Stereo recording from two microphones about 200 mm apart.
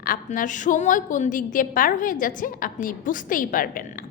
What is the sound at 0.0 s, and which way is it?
A woman's voice, 45° left (ahead or behind).